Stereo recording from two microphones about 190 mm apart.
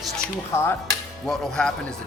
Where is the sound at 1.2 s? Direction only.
Centre (ahead or behind).